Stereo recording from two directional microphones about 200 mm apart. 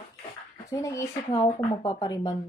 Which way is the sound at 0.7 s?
15° left (ahead or behind).